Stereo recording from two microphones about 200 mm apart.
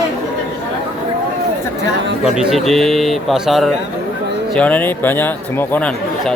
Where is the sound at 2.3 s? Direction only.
Centre (ahead or behind).